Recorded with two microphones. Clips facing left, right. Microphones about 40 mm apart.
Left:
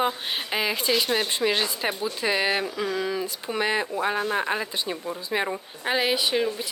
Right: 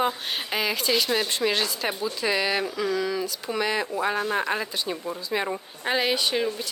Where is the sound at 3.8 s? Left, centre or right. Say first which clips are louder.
Even; centre.